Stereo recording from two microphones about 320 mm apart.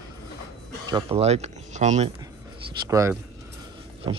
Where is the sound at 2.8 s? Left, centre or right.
Centre.